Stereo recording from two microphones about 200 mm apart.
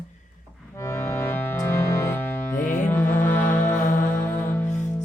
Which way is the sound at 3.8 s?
40° left (ahead or behind).